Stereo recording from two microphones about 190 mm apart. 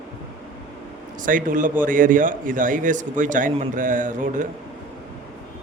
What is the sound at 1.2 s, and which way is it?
Speech, 45° right (ahead or behind).